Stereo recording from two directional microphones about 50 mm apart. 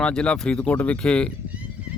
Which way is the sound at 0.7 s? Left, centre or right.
Left.